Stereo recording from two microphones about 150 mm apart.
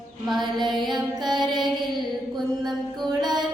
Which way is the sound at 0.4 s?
30° right (ahead or behind).